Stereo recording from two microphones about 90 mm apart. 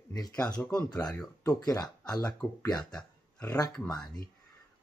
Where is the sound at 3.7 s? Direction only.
10° left (ahead or behind).